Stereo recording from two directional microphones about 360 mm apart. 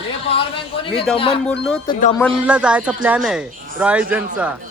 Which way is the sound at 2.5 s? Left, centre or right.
Centre.